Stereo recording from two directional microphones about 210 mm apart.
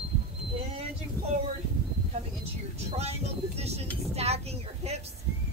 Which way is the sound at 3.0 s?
30° right (ahead or behind).